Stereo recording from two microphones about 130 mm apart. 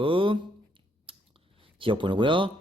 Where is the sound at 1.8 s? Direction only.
40° right (ahead or behind).